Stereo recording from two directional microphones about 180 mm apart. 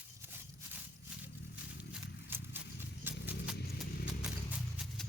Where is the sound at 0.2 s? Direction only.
10° right (ahead or behind).